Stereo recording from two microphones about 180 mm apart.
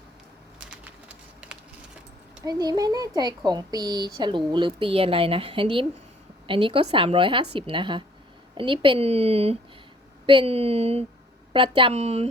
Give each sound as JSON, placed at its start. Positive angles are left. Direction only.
{"t": 0.7, "sound": "bird", "side_deg": -5}
{"t": 2.4, "sound": "a woman's voice", "side_deg": -20}